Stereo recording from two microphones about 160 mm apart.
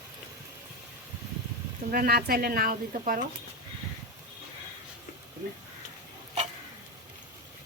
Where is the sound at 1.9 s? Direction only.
70° right (ahead or behind).